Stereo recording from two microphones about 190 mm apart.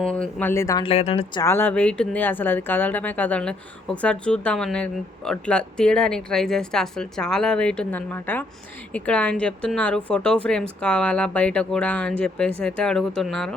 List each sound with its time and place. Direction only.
0.0 s speech: 5° left (ahead or behind)
0.9 s speech: 30° left (ahead or behind)
1.4 s speech: 10° left (ahead or behind)